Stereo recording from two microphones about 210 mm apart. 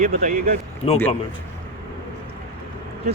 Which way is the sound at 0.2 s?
40° right (ahead or behind).